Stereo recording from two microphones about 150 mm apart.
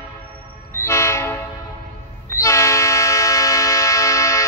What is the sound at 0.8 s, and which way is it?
Train, 20° left (ahead or behind).